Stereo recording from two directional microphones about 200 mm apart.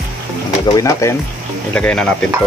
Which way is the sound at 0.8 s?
15° left (ahead or behind).